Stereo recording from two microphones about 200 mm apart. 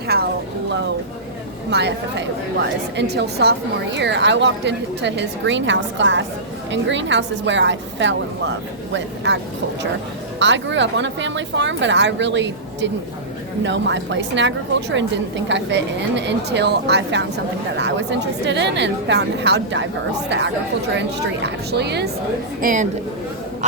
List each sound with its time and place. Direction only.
0.1 s a sound: 50° right (ahead or behind)
1.7 s a woman's voice: 60° right (ahead or behind)
10.4 s a woman's voice: 65° right (ahead or behind)
20.9 s a woman's voice: 60° right (ahead or behind)
22.6 s a woman's voice: 40° right (ahead or behind)